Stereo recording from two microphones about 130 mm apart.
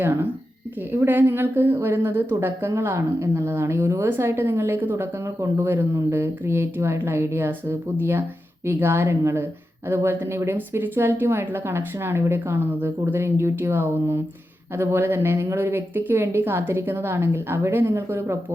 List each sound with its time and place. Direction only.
0.0 s a woman's voice: 20° right (ahead or behind)